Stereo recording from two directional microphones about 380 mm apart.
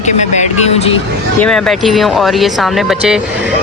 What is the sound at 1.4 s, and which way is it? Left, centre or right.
Speech, centre.